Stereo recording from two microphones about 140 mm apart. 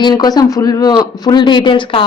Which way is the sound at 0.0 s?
30° left (ahead or behind).